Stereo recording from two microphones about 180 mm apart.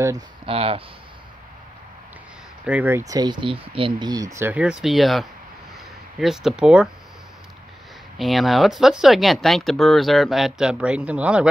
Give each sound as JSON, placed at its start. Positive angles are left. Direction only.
{"t": 0.5, "sound": "speech", "side_deg": -30}
{"t": 2.6, "sound": "speech", "side_deg": -10}
{"t": 3.1, "sound": "speech", "side_deg": -25}
{"t": 8.2, "sound": "speech", "side_deg": 0}